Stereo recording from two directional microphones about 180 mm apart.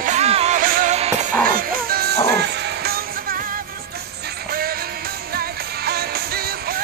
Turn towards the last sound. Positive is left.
turn(degrees=-60)  # may be behind; listen again after turning